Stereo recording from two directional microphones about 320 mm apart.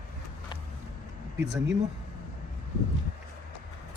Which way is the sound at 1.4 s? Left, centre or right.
Right.